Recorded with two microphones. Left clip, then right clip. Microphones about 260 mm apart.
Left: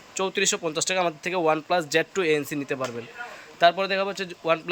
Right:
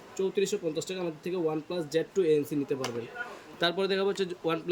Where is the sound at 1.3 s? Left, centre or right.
Left.